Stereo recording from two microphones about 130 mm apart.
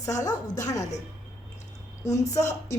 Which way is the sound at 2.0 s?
25° left (ahead or behind).